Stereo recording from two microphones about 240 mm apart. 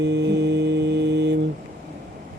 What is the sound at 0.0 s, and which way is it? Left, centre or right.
Mantra, right.